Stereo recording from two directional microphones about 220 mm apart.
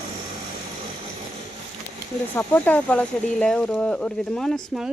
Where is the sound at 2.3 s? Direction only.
5° left (ahead or behind).